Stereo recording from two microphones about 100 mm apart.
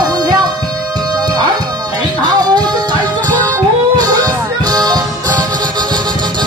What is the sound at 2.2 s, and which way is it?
Music, 40° right (ahead or behind).